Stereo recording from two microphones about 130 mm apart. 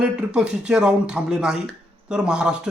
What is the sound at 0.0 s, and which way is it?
Speech, 5° right (ahead or behind).